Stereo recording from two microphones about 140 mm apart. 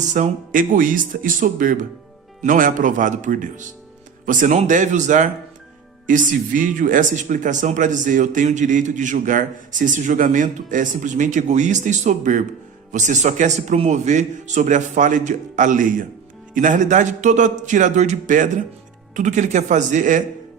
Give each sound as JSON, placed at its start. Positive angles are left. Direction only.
{"t": 0.1, "sound": "speech", "side_deg": -70}